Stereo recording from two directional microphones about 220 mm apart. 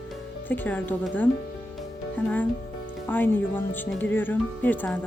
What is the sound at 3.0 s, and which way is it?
Speech, 10° left (ahead or behind).